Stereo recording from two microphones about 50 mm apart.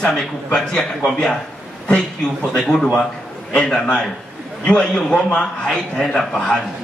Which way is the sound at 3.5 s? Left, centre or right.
Left.